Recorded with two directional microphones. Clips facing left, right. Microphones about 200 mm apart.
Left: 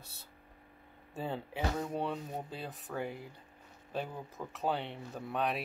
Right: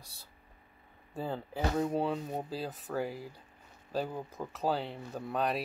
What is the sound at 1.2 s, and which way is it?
Speech, centre (ahead or behind).